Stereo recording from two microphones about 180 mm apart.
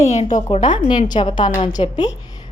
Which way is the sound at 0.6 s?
25° left (ahead or behind).